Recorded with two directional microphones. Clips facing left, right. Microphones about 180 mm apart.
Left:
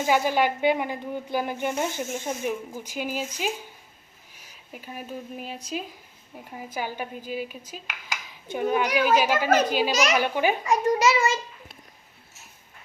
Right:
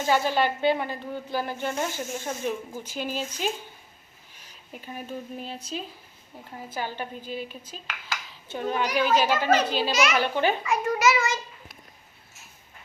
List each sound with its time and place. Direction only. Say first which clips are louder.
0.0 s speech: left 1 dB; 15° left (ahead or behind)
9.9 s a child's voice: left 1 dB; 40° left (ahead or behind)
10.2 s speech: left 1 dB; 10° left (ahead or behind)
10.6 s a child's voice: left 2 dB; 40° left (ahead or behind)